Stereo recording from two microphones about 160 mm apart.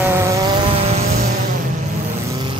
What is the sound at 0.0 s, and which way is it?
Vehicle, 15° right (ahead or behind).